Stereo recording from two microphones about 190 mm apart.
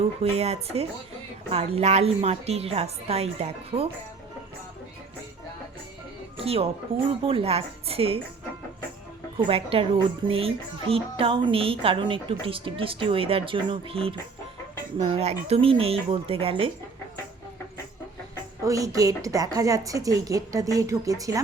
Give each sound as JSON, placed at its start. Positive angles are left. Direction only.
{"t": 0.2, "sound": "a woman's voice", "side_deg": -30}
{"t": 6.3, "sound": "music", "side_deg": -30}
{"t": 7.1, "sound": "a woman's voice", "side_deg": -30}
{"t": 9.5, "sound": "a woman's voice", "side_deg": -30}
{"t": 18.6, "sound": "a woman's voice", "side_deg": -15}